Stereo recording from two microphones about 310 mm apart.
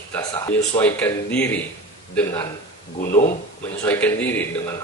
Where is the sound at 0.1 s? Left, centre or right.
Centre.